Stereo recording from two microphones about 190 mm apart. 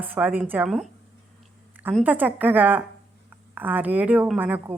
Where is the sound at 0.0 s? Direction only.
10° right (ahead or behind).